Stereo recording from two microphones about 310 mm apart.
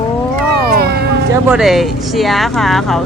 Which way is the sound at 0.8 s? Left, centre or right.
Right.